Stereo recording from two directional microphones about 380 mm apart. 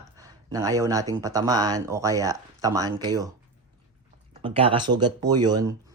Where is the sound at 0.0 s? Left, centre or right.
Centre.